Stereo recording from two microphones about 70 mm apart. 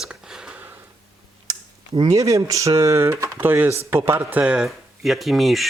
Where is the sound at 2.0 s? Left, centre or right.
Right.